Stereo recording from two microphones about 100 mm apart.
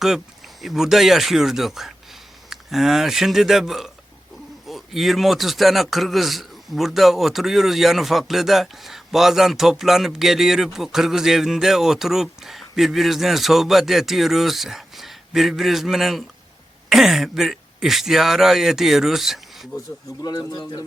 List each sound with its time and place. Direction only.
0.6 s a man's voice: 5° right (ahead or behind)
20.2 s a man's voice: 40° left (ahead or behind)